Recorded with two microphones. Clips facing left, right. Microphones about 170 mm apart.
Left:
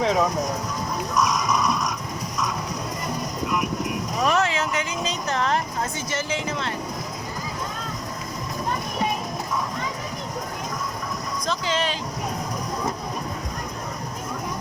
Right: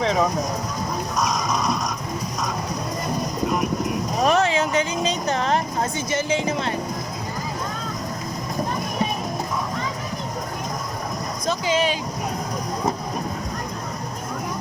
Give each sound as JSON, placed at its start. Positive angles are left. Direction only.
{"t": 0.0, "sound": "speech", "side_deg": 5}
{"t": 1.1, "sound": "a sound", "side_deg": -35}
{"t": 4.3, "sound": "vehicle", "side_deg": -20}
{"t": 4.8, "sound": "a sound", "side_deg": -20}
{"t": 6.1, "sound": "speech", "side_deg": -15}
{"t": 11.6, "sound": "speech", "side_deg": -10}